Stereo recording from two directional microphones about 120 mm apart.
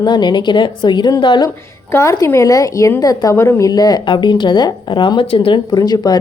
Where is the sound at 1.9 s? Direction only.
25° left (ahead or behind); by 5.6 s 50° left (ahead or behind).